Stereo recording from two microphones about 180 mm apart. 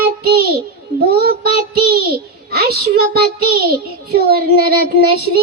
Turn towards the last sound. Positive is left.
turn(degrees=-60)  # may be behind; listen again after turning